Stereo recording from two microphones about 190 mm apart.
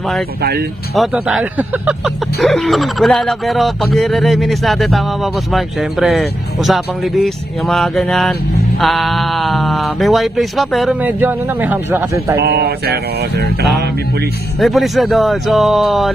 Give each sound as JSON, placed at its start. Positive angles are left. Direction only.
{"t": 0.4, "sound": "mantra", "side_deg": -55}
{"t": 0.9, "sound": "speech", "side_deg": 0}
{"t": 12.4, "sound": "mantra", "side_deg": -55}
{"t": 14.6, "sound": "speech", "side_deg": 0}